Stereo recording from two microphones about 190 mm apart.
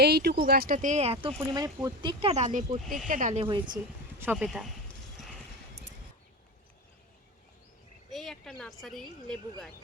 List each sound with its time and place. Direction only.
0.0 s speech: 60° right (ahead or behind); by 1.3 s 30° right (ahead or behind)
1.4 s speech: 20° right (ahead or behind); by 3.4 s 40° right (ahead or behind)
3.4 s speech: 25° right (ahead or behind)
4.2 s a woman's voice: 5° right (ahead or behind)
8.1 s a woman's voice: centre (ahead or behind)